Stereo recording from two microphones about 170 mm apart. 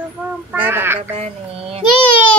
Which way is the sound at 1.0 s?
35° right (ahead or behind).